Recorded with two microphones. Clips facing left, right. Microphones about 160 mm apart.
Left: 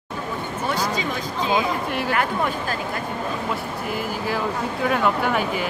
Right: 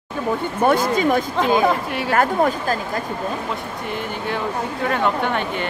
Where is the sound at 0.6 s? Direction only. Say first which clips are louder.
Right 8 dB; 55° right (ahead or behind).